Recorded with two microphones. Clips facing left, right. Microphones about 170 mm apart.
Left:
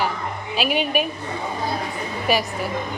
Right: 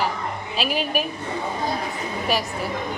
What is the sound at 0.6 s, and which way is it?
Speech, centre (ahead or behind).